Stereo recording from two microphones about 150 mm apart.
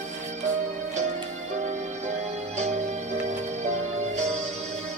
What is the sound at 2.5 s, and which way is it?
Music, 50° right (ahead or behind).